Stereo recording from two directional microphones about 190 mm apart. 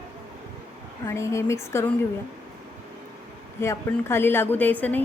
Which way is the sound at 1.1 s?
15° left (ahead or behind).